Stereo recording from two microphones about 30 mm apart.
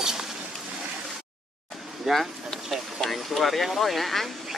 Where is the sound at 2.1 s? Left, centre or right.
Centre.